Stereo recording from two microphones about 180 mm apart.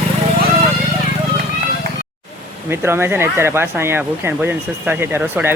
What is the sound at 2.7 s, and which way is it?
Speech, 15° right (ahead or behind).